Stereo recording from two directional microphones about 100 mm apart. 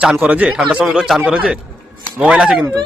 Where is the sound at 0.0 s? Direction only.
10° right (ahead or behind).